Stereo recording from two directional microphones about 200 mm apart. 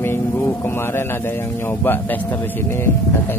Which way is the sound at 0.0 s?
10° left (ahead or behind).